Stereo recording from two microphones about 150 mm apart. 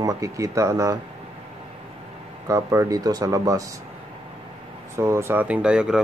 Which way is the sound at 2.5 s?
20° right (ahead or behind).